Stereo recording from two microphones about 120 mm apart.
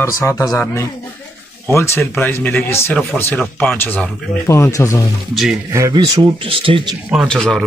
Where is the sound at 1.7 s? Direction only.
20° left (ahead or behind).